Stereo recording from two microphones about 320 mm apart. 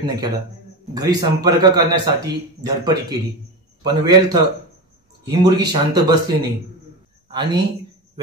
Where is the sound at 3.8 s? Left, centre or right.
Centre.